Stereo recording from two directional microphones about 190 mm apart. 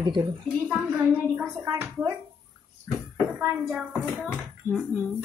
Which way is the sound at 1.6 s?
15° right (ahead or behind).